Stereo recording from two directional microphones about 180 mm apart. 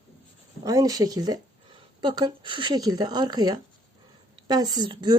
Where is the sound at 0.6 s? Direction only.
20° right (ahead or behind).